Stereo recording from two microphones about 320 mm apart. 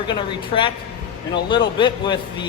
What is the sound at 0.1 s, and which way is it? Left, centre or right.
Speech, centre.